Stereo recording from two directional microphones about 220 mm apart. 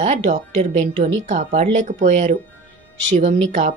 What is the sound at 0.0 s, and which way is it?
A woman's voice, 30° right (ahead or behind).